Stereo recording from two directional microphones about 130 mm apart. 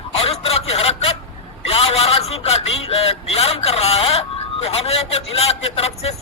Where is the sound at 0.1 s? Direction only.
50° left (ahead or behind).